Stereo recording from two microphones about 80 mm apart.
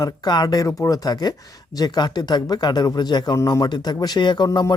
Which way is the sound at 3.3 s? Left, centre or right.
Left.